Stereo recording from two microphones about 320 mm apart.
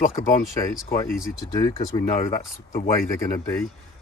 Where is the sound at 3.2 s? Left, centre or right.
Centre.